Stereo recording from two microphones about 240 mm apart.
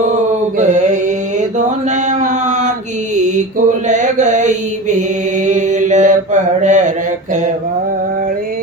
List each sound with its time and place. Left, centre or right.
0.6 s mantra: right
2.0 s chant: right
3.2 s mantra: right